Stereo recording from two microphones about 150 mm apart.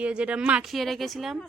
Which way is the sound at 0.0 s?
5° right (ahead or behind).